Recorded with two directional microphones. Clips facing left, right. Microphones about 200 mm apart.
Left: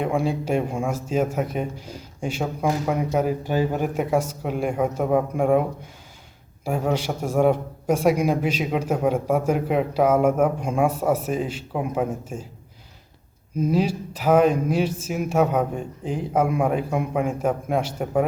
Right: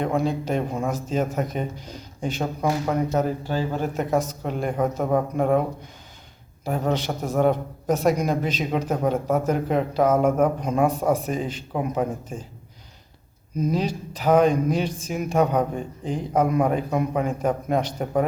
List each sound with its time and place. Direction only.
0.0 s a man's voice: 10° left (ahead or behind)
13.6 s a man's voice: 5° left (ahead or behind)